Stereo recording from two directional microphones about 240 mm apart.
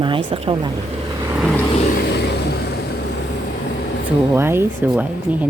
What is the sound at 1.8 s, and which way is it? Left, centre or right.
Vehicle, left.